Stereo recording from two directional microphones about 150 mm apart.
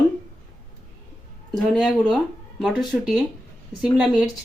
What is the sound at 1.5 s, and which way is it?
Speech, centre (ahead or behind).